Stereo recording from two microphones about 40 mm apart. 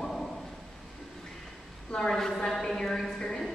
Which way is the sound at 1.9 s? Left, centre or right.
Centre.